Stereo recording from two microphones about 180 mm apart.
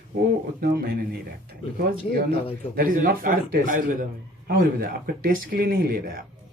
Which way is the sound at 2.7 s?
50° right (ahead or behind).